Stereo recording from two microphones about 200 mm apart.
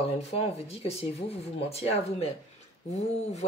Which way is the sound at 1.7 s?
30° left (ahead or behind).